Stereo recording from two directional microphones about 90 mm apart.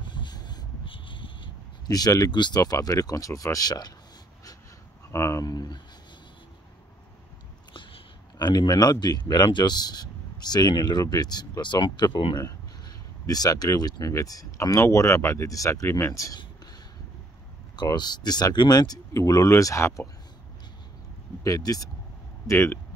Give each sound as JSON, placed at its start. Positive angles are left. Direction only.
{"t": 0.1, "sound": "a sound", "side_deg": 55}
{"t": 0.8, "sound": "a sound", "side_deg": 70}
{"t": 1.9, "sound": "speech", "side_deg": 45}
{"t": 5.1, "sound": "speech", "side_deg": 35}
{"t": 5.5, "sound": "speech", "side_deg": 50}
{"t": 7.7, "sound": "a sound", "side_deg": 65}
{"t": 9.3, "sound": "speech", "side_deg": 55}
{"t": 12.4, "sound": "speech", "side_deg": 45}
{"t": 17.7, "sound": "speech", "side_deg": 50}
{"t": 21.5, "sound": "speech", "side_deg": 40}
{"t": 22.5, "sound": "speech", "side_deg": 25}